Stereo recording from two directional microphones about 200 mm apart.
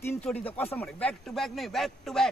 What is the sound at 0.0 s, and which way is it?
Speech, 10° left (ahead or behind).